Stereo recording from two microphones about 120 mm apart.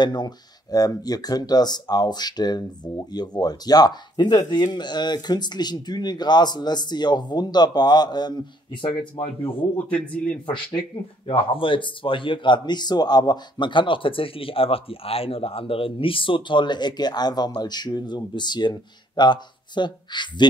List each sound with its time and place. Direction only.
0.0 s speech: 35° left (ahead or behind)
9.8 s speech: 10° left (ahead or behind)
10.4 s speech: 45° left (ahead or behind)